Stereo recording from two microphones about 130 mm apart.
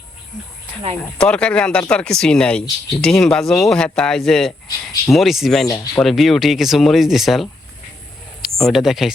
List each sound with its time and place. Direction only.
1.2 s speech: 10° left (ahead or behind)
5.6 s speech: 25° left (ahead or behind)
6.0 s speech: centre (ahead or behind)